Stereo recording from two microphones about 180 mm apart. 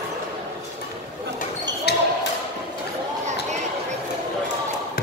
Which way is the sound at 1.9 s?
65° left (ahead or behind).